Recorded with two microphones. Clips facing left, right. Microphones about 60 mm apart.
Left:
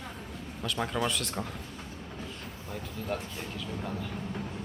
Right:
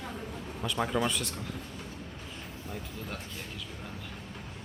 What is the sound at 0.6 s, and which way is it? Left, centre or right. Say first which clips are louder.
Speech: right 1 dB; centre.